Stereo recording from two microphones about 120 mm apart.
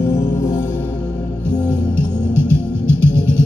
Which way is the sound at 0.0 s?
25° left (ahead or behind).